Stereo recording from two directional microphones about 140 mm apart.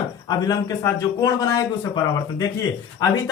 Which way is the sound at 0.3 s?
30° left (ahead or behind).